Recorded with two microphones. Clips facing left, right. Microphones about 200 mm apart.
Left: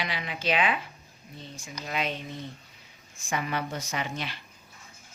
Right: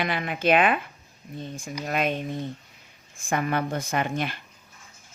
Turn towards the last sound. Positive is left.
turn(degrees=-50)  # may be behind; listen again after turning